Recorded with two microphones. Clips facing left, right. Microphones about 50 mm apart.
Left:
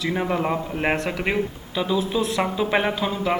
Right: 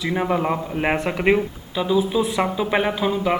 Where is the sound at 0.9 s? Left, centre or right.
Centre.